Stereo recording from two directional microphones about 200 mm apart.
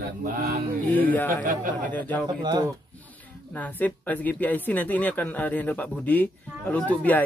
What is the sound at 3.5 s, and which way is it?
Speech, 5° left (ahead or behind).